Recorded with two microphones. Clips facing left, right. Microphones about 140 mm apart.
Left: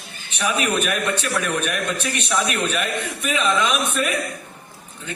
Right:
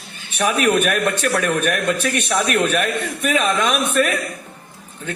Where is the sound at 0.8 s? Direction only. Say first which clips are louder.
Right 4 dB; 50° right (ahead or behind).